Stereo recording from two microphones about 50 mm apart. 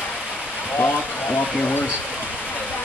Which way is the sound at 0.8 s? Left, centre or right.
Left.